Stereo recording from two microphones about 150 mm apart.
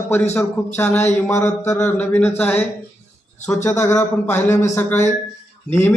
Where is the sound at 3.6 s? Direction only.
20° left (ahead or behind).